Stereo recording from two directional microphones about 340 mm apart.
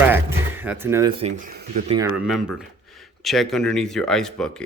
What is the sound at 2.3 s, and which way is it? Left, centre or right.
Speech, centre.